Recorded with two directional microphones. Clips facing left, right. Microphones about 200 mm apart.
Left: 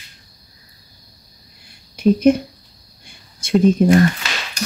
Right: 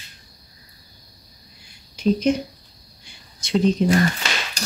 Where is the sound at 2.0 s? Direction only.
55° left (ahead or behind).